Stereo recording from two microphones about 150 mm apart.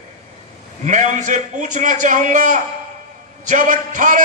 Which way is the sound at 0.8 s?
55° right (ahead or behind).